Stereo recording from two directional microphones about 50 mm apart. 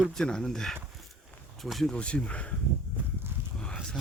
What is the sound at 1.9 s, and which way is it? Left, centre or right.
Speech, left.